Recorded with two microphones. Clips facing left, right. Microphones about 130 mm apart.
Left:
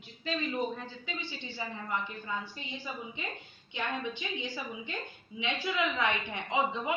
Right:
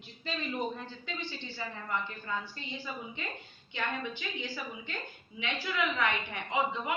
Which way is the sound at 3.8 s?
20° left (ahead or behind).